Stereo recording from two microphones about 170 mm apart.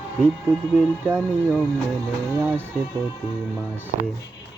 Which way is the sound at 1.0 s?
15° right (ahead or behind).